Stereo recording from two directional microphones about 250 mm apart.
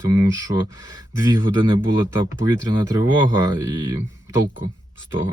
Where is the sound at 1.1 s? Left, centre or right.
Centre.